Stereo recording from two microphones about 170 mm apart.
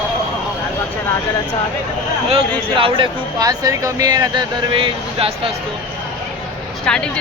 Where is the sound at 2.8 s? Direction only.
30° right (ahead or behind).